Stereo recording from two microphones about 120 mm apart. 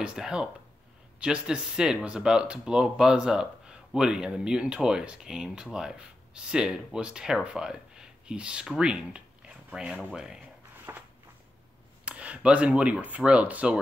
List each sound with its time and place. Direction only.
0.0 s speech: 5° right (ahead or behind)
10.9 s a sound: 20° right (ahead or behind)
12.0 s speech: 10° right (ahead or behind)